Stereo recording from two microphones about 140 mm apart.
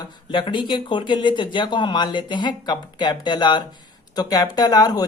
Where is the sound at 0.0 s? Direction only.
35° left (ahead or behind).